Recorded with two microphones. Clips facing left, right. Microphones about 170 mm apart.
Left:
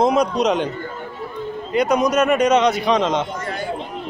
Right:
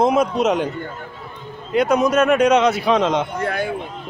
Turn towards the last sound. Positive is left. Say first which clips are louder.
# right 3 dB
turn(degrees=-60)  # may be behind; listen again after turning